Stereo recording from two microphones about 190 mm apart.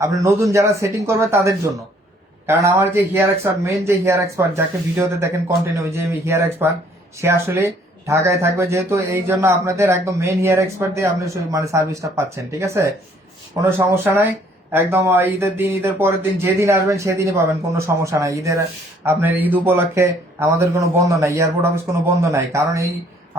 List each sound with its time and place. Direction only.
0.1 s speech: 15° right (ahead or behind)